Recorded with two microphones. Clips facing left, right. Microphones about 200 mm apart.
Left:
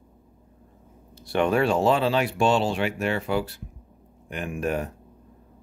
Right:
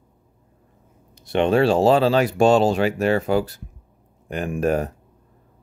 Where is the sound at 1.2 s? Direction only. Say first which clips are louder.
Right 4 dB; 25° right (ahead or behind).